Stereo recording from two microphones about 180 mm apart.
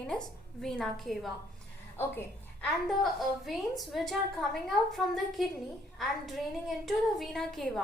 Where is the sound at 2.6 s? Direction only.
Centre (ahead or behind).